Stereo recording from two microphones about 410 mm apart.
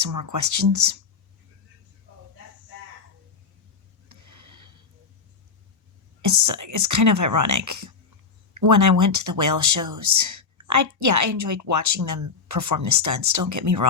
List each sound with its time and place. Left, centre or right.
0.0 s speech: right
4.1 s a sound: right
6.2 s speech: right